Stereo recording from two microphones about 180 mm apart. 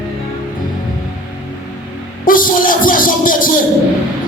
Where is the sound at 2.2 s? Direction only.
50° left (ahead or behind).